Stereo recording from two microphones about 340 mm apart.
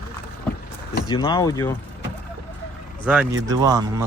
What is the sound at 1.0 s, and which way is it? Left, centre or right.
Speech, centre.